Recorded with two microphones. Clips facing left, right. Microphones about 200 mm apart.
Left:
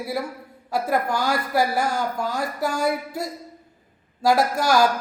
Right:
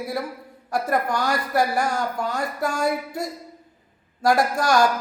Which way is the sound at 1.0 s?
25° left (ahead or behind).